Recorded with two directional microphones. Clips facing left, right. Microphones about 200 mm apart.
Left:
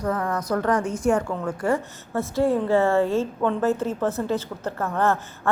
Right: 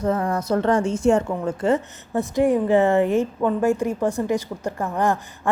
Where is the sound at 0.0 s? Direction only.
25° right (ahead or behind).